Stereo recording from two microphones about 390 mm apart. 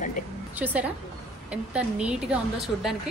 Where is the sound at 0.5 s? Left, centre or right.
Centre.